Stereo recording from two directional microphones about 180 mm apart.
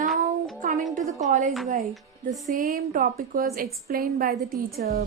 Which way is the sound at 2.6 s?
50° right (ahead or behind).